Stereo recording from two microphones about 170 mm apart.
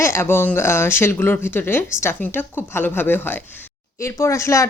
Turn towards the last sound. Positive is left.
turn(degrees=15)  # may be behind; listen again after turning